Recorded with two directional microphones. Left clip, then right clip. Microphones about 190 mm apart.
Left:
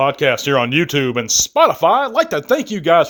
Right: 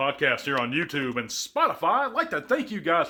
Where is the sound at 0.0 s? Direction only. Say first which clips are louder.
Left 9 dB; 50° left (ahead or behind).